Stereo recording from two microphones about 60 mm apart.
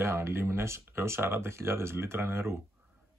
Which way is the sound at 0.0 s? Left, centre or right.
Right.